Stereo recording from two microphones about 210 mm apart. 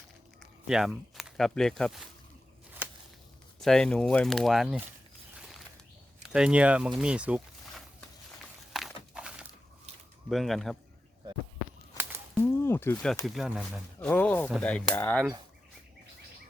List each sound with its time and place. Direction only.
0.7 s speech: centre (ahead or behind)
3.6 s speech: 5° left (ahead or behind)
6.2 s speech: 5° right (ahead or behind)
8.7 s crumpling: 5° right (ahead or behind)
10.2 s speech: centre (ahead or behind)
12.3 s a sound: 10° left (ahead or behind)
13.2 s speech: centre (ahead or behind)
14.1 s speech: 10° left (ahead or behind)